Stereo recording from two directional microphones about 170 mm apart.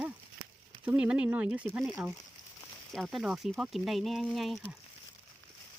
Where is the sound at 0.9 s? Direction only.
5° right (ahead or behind).